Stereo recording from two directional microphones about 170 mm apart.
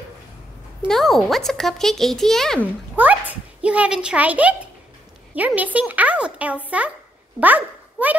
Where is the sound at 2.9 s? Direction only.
10° right (ahead or behind).